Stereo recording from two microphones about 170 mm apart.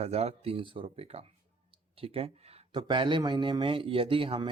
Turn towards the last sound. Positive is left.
turn(degrees=-30)  # may be behind; listen again after turning